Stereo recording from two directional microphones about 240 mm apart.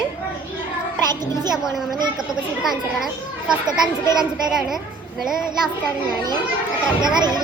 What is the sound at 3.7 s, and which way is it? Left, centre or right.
Speech, centre.